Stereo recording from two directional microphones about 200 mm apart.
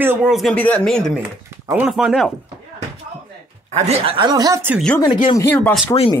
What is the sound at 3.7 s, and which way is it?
Speech, 30° right (ahead or behind).